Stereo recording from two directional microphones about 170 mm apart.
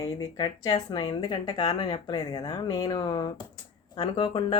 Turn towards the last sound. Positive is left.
turn(degrees=30)  # may be behind; listen again after turning